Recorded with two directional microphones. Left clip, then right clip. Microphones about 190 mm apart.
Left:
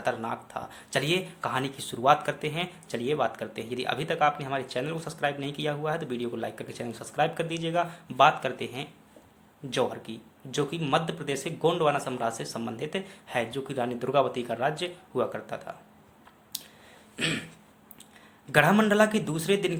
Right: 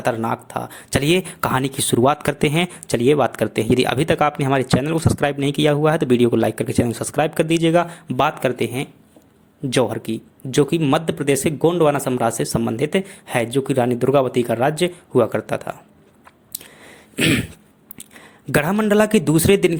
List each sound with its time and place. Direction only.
0.0 s speech: 45° right (ahead or behind)
17.2 s speech: 40° right (ahead or behind)
18.5 s speech: 45° right (ahead or behind)